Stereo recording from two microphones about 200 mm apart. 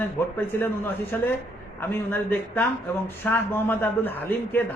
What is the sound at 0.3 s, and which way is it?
Speech, 10° left (ahead or behind).